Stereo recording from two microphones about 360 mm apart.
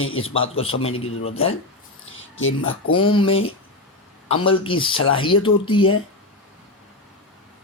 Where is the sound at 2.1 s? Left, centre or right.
Left.